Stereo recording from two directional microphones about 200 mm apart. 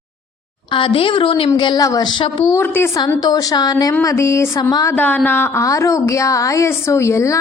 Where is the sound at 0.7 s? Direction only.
25° left (ahead or behind).